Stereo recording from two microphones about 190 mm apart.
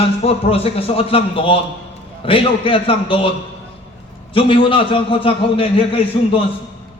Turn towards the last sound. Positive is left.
turn(degrees=30)  # may be behind; listen again after turning